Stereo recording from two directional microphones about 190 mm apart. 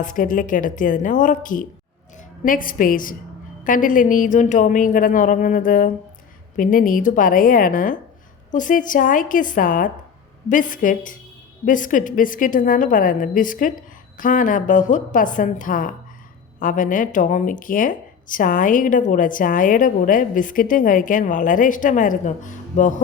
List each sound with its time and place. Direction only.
0.0 s a woman's voice: 45° left (ahead or behind)